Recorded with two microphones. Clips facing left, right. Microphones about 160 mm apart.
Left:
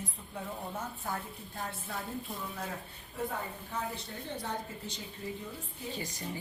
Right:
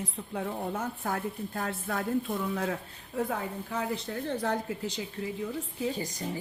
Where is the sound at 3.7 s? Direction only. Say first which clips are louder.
Right 6 dB; 90° right.